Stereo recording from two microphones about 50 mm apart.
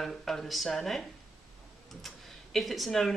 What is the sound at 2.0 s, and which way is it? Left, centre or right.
Speech, centre.